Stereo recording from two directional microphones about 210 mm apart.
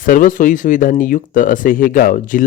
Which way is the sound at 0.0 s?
40° left (ahead or behind).